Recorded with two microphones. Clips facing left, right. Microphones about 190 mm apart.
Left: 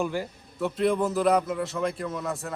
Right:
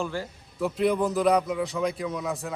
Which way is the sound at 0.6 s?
Centre (ahead or behind).